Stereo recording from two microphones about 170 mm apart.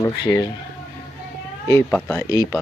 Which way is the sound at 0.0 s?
25° left (ahead or behind).